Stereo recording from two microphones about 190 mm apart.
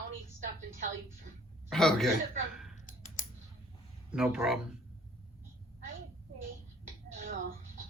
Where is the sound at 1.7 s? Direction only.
Centre (ahead or behind).